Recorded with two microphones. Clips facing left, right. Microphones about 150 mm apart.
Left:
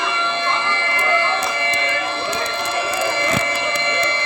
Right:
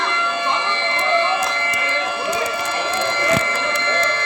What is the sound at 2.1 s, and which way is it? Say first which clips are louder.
Music: right 1 dB; 10° right (ahead or behind).